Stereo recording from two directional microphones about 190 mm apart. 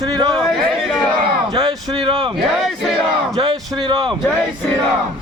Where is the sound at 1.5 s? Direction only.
20° right (ahead or behind).